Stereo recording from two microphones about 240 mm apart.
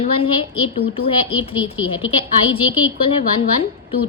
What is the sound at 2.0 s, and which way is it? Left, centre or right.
Speech, left.